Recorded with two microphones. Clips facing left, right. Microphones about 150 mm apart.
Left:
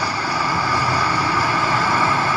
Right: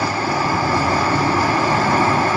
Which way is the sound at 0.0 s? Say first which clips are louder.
Right 3 dB; 50° right (ahead or behind).